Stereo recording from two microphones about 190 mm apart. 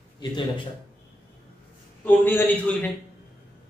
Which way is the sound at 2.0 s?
10° left (ahead or behind).